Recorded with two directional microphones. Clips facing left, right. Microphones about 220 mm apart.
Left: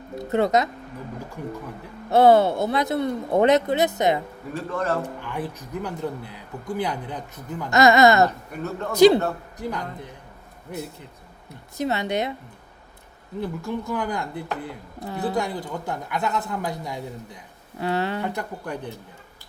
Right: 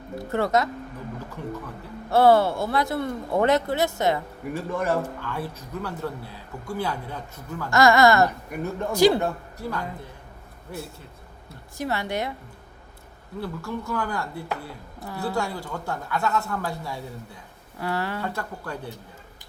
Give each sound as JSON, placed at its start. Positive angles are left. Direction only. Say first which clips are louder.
{"t": 0.2, "sound": "speech", "louder": "left 3 dB", "side_deg": 20}
{"t": 4.5, "sound": "a man's voice", "louder": "even", "side_deg": -15}
{"t": 5.0, "sound": "a woman's voice", "louder": "left 1 dB", "side_deg": 15}
{"t": 8.5, "sound": "a man's voice", "louder": "right 1 dB", "side_deg": -10}
{"t": 8.9, "sound": "a woman's voice", "louder": "left 4 dB", "side_deg": 20}
{"t": 13.4, "sound": "a woman's voice", "louder": "left 3 dB", "side_deg": 20}